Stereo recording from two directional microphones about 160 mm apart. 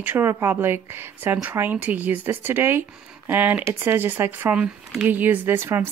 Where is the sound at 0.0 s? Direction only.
15° right (ahead or behind).